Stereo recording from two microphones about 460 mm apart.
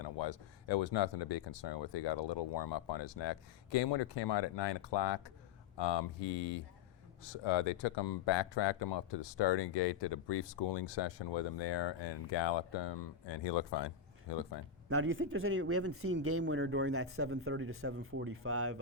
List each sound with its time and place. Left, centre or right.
0.0 s speech: left
7.3 s speech: left
14.8 s speech: right